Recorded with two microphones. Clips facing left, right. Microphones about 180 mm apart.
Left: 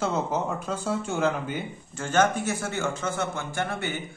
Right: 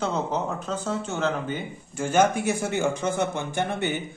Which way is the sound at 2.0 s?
10° right (ahead or behind).